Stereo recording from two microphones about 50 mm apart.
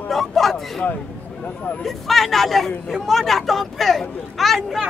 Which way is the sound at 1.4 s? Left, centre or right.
Left.